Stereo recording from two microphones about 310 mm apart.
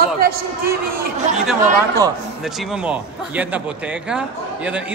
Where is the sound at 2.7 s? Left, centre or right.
Centre.